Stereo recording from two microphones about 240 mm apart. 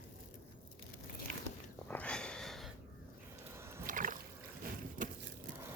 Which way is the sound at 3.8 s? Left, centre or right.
Right.